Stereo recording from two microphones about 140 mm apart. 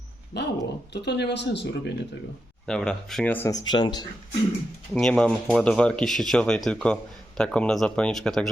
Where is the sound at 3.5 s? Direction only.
30° left (ahead or behind).